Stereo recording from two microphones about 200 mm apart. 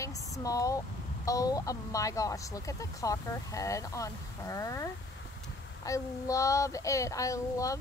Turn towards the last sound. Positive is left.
turn(degrees=15)  # may be behind; listen again after turning